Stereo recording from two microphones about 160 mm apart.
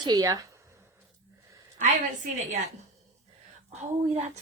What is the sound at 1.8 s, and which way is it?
Speech, 50° right (ahead or behind).